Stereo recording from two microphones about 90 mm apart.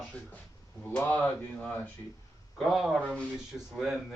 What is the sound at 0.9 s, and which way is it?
Speech, 15° left (ahead or behind).